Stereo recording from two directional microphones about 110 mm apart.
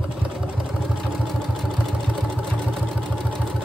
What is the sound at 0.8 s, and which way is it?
Vehicle, 5° left (ahead or behind).